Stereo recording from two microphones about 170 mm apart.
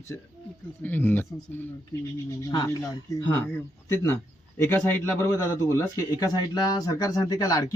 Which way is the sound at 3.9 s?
15° left (ahead or behind).